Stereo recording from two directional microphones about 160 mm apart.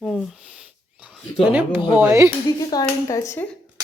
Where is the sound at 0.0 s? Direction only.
Centre (ahead or behind).